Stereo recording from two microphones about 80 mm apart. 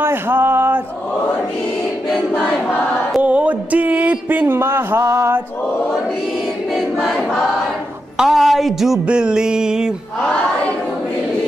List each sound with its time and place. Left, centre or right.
0.0 s a sound: right
3.2 s a sound: centre
4.6 s speech: right
6.7 s choir: centre
8.2 s a woman's voice: centre
9.0 s mantra: centre